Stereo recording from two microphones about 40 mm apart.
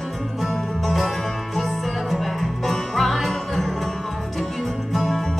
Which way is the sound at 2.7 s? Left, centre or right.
Centre.